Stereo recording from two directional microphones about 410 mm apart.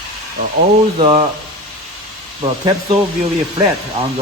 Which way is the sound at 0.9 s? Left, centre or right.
Centre.